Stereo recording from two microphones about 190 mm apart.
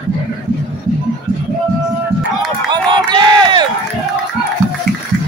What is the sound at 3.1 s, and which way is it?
Crowd, 25° right (ahead or behind).